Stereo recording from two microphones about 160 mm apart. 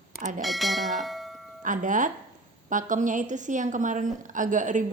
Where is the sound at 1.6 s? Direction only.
55° right (ahead or behind).